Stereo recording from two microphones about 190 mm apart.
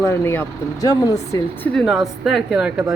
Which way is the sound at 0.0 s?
15° left (ahead or behind).